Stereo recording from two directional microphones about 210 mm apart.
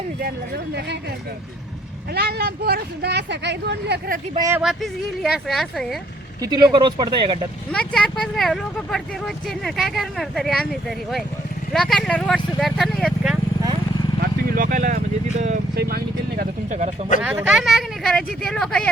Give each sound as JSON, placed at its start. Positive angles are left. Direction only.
{"t": 0.2, "sound": "speech", "side_deg": -50}
{"t": 2.1, "sound": "speech", "side_deg": -50}
{"t": 4.4, "sound": "speech", "side_deg": -15}
{"t": 4.6, "sound": "speech", "side_deg": 0}
{"t": 6.4, "sound": "speech", "side_deg": -20}
{"t": 7.7, "sound": "speech", "side_deg": 5}
{"t": 14.5, "sound": "speech", "side_deg": -40}
{"t": 17.2, "sound": "speech", "side_deg": -5}